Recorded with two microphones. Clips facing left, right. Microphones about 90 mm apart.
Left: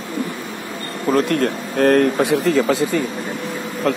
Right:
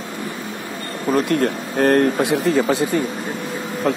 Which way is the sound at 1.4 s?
85° left.